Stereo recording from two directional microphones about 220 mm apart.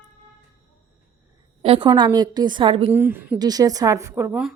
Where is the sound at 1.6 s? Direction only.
25° right (ahead or behind).